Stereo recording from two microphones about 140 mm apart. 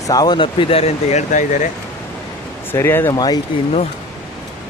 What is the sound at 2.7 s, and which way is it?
Speech, 15° left (ahead or behind).